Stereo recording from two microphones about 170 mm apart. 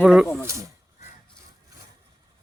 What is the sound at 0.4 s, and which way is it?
Speech, 15° right (ahead or behind).